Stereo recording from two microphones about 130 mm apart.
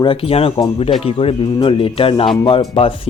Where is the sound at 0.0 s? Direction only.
45° left (ahead or behind).